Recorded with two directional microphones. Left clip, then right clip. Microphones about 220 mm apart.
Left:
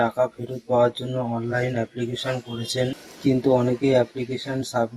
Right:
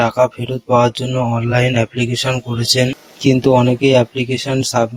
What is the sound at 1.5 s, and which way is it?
Speech, 45° right (ahead or behind).